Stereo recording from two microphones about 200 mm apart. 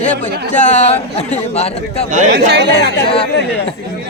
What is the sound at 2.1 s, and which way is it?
Speech, 40° right (ahead or behind).